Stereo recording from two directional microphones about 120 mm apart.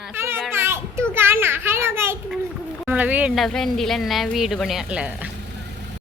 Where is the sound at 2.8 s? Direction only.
15° right (ahead or behind).